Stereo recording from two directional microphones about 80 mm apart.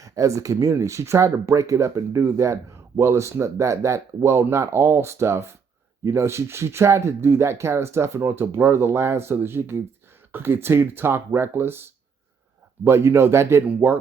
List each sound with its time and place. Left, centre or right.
0.0 s speech: right